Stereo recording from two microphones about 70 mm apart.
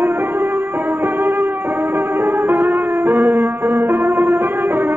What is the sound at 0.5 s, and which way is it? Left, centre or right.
Music, right.